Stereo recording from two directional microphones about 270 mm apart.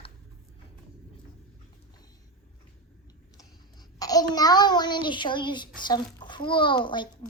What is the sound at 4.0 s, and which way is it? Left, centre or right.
A child's voice, centre.